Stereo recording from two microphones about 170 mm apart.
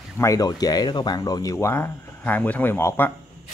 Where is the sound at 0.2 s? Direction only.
20° left (ahead or behind).